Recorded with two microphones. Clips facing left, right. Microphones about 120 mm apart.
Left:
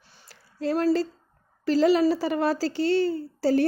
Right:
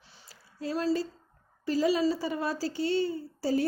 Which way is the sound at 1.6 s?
85° left.